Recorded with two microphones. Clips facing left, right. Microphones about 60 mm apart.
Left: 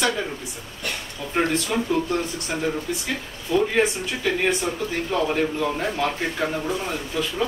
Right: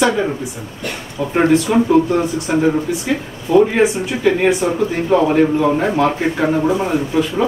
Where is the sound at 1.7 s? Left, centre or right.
Right.